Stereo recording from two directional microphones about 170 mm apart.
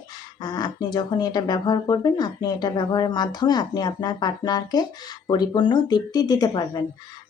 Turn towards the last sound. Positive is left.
turn(degrees=25)  # may be behind; listen again after turning